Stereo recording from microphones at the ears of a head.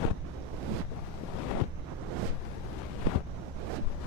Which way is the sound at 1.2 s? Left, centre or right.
Left.